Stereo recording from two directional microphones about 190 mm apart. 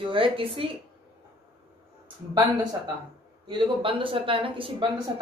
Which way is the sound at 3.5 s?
25° right (ahead or behind).